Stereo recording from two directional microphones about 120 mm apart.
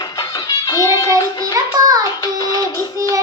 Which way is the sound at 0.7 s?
30° left (ahead or behind).